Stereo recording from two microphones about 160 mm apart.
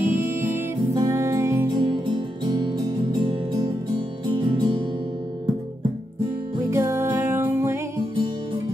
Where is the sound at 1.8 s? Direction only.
30° right (ahead or behind).